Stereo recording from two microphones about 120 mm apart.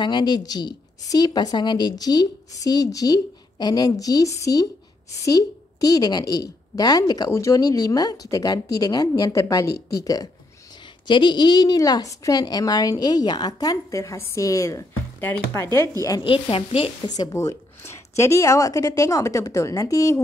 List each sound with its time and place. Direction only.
0.0 s a woman's voice: 40° left (ahead or behind)
11.1 s a woman's voice: 40° left (ahead or behind)
16.3 s sizzle: 50° left (ahead or behind)
17.1 s a woman's voice: 30° left (ahead or behind)